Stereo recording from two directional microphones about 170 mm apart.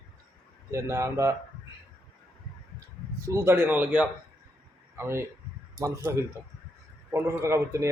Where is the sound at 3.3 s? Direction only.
15° right (ahead or behind).